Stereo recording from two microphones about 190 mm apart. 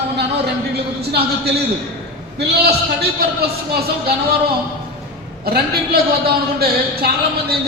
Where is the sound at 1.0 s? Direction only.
55° right (ahead or behind).